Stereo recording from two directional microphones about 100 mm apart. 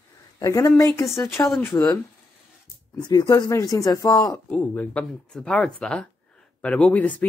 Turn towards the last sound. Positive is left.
turn(degrees=15)  # may be behind; listen again after turning